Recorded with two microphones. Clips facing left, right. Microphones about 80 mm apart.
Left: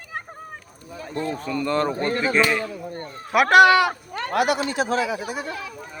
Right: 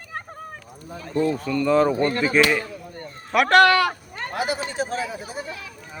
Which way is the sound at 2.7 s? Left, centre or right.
Left.